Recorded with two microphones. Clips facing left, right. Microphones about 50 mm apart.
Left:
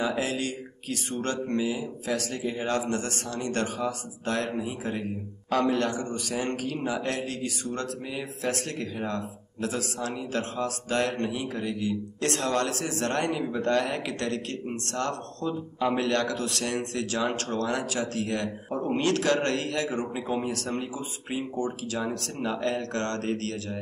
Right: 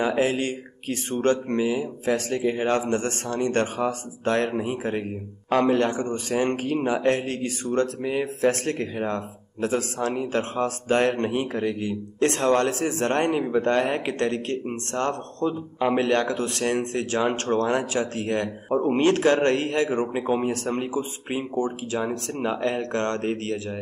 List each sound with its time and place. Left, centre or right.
0.0 s a man's voice: right